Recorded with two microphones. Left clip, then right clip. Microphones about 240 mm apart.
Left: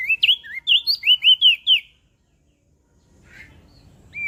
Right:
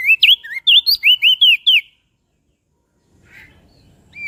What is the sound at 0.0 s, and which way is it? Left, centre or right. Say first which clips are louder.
Bird: right 7 dB; right.